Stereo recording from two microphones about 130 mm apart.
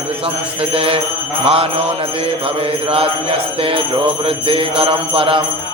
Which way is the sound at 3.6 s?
45° right (ahead or behind).